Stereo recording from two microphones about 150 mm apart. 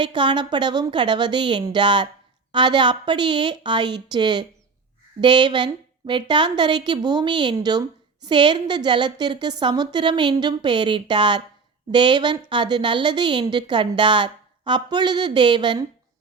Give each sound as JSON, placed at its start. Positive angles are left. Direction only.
{"t": 0.0, "sound": "a woman's voice", "side_deg": -30}